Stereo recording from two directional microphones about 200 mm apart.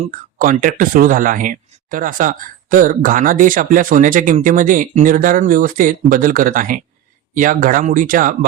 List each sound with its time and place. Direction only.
0.3 s speech: 45° right (ahead or behind)